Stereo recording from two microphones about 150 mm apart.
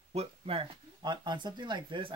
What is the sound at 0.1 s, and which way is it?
Speech, 40° right (ahead or behind).